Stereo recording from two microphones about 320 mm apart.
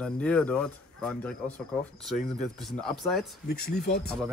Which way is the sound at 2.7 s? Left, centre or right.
Centre.